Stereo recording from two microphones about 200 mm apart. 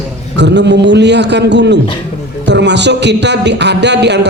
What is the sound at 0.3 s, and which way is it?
A man's voice, 60° right (ahead or behind).